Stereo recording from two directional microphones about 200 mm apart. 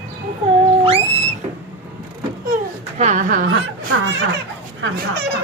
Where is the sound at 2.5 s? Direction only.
35° right (ahead or behind).